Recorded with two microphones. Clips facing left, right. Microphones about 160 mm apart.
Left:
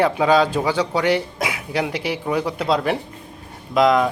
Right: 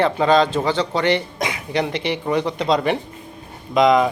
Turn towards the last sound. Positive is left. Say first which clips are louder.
# right 1 dB
turn(degrees=0)  # may be behind; listen again after turning